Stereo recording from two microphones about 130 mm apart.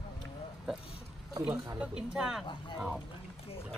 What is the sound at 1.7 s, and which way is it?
Speech, 5° right (ahead or behind).